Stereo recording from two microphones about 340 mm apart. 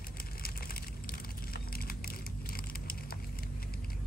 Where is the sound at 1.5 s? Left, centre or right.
Left.